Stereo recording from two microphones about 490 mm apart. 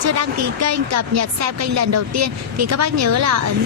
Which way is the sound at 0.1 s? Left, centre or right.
Right.